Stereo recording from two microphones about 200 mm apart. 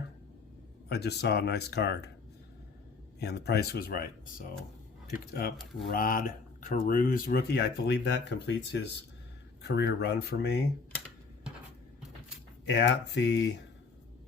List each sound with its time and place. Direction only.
0.9 s speech: 55° left (ahead or behind)
3.2 s speech: 55° left (ahead or behind)
12.6 s speech: 60° left (ahead or behind)